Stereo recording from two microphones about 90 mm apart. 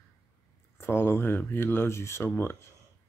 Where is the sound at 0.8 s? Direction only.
25° left (ahead or behind).